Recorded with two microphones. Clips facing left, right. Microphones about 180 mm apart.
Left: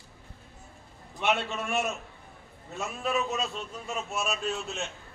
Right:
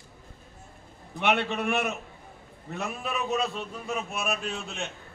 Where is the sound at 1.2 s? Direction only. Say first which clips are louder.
Right 3 dB; 60° right (ahead or behind).